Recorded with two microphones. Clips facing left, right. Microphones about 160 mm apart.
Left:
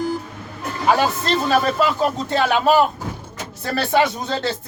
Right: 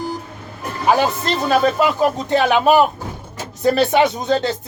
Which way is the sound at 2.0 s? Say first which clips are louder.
Right 3 dB; 15° right (ahead or behind).